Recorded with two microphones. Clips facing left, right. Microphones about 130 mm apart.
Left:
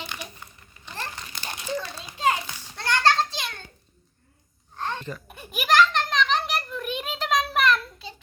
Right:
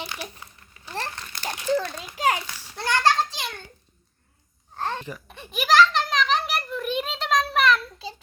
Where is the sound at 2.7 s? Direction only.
10° right (ahead or behind).